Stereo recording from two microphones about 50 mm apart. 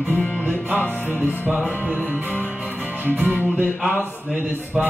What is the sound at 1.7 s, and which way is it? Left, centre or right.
Music, right.